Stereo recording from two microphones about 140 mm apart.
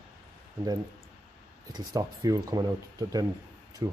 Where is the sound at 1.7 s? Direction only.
30° right (ahead or behind).